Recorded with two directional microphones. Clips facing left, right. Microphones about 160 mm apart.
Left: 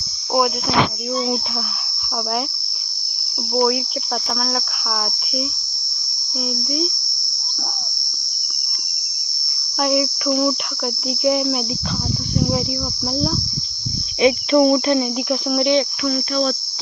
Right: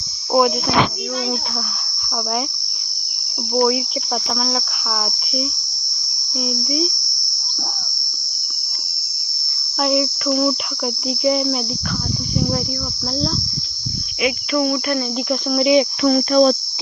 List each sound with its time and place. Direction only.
3.5 s cricket: centre (ahead or behind)
6.7 s cricket: centre (ahead or behind)
9.8 s cricket: centre (ahead or behind)
14.2 s cricket: 30° left (ahead or behind)
15.3 s cricket: centre (ahead or behind)
16.0 s cricket: 45° right (ahead or behind)